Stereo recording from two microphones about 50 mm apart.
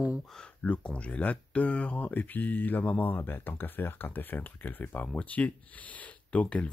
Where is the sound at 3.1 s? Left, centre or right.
Left.